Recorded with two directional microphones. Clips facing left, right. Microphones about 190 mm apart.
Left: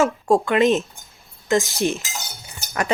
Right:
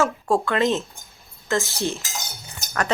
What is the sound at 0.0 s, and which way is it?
Speech, 15° left (ahead or behind).